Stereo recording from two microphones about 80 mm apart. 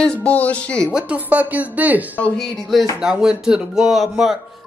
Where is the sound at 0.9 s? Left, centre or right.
Centre.